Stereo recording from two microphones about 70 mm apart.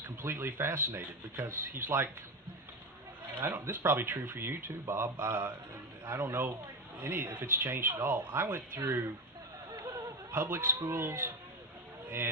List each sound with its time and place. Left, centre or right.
0.2 s speech: right
3.4 s speech: right
9.7 s a sound: right
10.3 s speech: right